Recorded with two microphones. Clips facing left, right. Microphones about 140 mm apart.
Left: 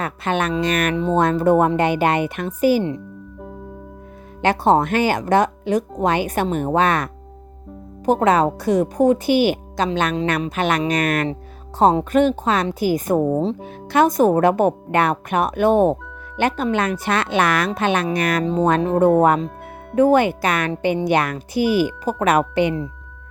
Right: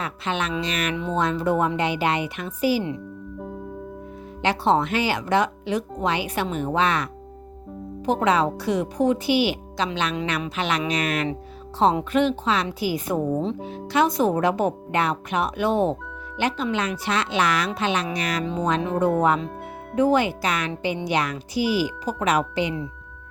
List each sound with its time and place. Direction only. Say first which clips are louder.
0.0 s speech: left 5 dB; 50° left (ahead or behind)
4.4 s speech: left 4 dB; 45° left (ahead or behind)
18.4 s speech: left 6 dB; 35° left (ahead or behind); by 22.7 s 55° left (ahead or behind)